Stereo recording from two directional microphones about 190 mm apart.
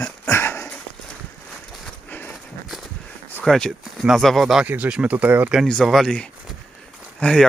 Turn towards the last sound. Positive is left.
turn(degrees=5)  # may be behind; listen again after turning